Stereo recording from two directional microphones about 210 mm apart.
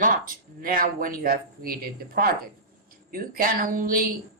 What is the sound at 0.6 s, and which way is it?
Speech, 40° right (ahead or behind).